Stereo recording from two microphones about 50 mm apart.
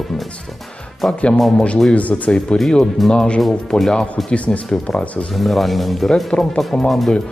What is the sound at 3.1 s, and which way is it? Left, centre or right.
Speech, centre.